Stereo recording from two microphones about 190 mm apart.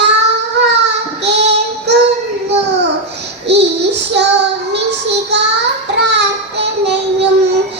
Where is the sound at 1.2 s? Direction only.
65° right (ahead or behind).